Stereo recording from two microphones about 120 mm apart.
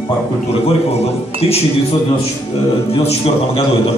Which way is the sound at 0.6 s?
55° left (ahead or behind).